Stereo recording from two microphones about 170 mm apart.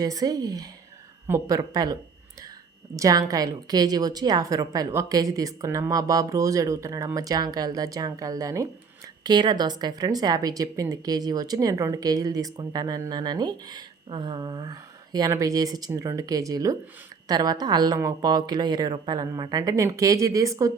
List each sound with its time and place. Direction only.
0.0 s a woman's voice: 20° right (ahead or behind)